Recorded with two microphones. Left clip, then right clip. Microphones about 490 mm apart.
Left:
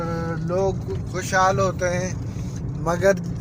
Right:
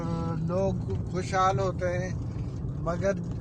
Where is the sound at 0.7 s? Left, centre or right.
Centre.